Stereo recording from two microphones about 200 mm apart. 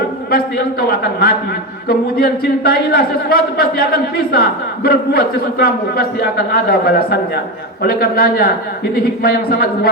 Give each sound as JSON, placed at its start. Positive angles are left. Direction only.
{"t": 0.3, "sound": "a man's voice", "side_deg": 50}